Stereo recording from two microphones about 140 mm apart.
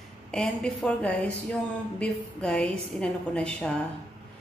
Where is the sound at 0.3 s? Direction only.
5° left (ahead or behind).